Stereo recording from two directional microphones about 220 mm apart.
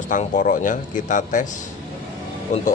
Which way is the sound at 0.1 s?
35° left (ahead or behind).